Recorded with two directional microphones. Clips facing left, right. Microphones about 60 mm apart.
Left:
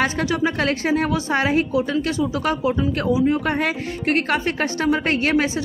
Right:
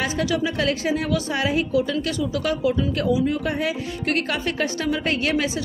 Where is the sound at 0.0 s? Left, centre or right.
Left.